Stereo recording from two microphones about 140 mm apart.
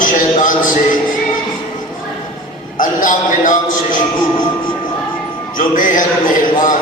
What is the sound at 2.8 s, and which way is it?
A man's voice, 70° left (ahead or behind).